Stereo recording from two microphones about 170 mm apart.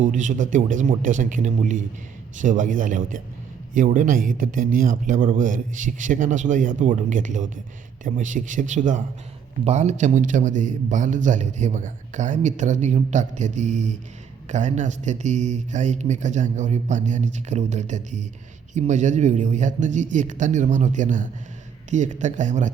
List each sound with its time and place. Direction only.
0.0 s a man's voice: 50° right (ahead or behind)